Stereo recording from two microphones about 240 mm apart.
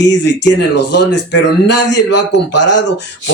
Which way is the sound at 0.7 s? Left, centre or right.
Left.